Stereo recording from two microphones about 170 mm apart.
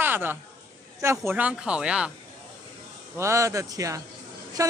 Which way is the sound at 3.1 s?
15° right (ahead or behind).